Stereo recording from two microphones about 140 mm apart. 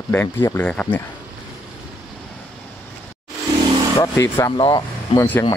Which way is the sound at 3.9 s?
20° left (ahead or behind).